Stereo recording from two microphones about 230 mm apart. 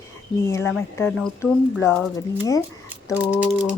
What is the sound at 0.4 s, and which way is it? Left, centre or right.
Speech, centre.